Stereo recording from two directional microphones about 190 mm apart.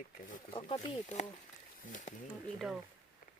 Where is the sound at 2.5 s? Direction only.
Centre (ahead or behind).